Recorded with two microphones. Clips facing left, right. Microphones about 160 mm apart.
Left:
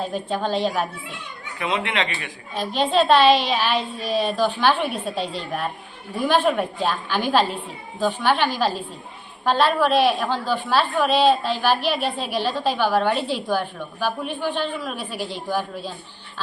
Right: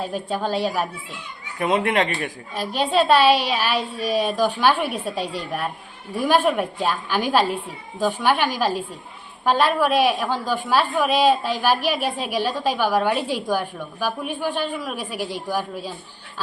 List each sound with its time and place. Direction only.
0.0 s a woman's voice: 5° right (ahead or behind)
1.5 s speech: 50° right (ahead or behind)
2.6 s a woman's voice: 10° right (ahead or behind)